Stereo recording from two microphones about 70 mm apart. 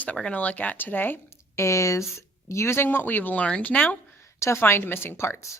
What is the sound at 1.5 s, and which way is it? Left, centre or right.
Speech, left.